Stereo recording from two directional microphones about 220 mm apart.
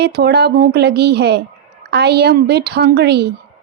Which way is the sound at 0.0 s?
45° right (ahead or behind).